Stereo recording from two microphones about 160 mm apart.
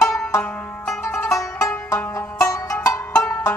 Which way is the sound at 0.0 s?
5° left (ahead or behind).